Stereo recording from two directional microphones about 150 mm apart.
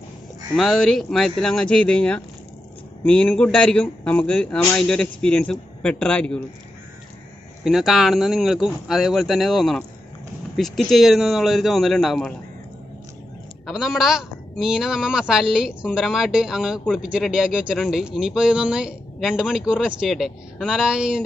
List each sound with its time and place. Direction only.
0.6 s speech: centre (ahead or behind)
7.6 s speech: centre (ahead or behind)
13.7 s speech: 5° right (ahead or behind)